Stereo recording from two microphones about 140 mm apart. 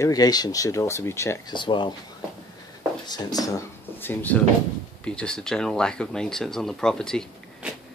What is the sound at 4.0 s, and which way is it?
Speech, 15° left (ahead or behind).